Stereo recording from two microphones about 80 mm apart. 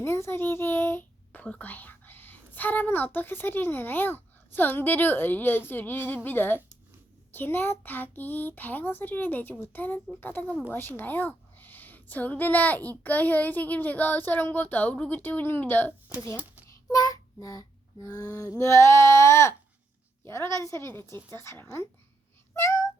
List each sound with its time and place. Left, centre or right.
0.0 s a child's voice: left
1.4 s a woman's voice: centre
16.9 s a sound: left
20.2 s a woman's voice: left